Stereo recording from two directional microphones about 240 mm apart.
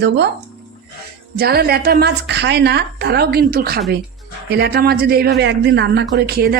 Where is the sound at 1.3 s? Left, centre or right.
Right.